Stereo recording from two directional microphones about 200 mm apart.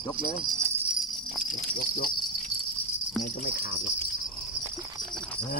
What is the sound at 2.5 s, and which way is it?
Insect, 30° right (ahead or behind).